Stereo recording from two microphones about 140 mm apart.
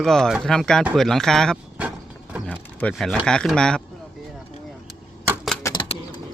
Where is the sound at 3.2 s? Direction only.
5° left (ahead or behind).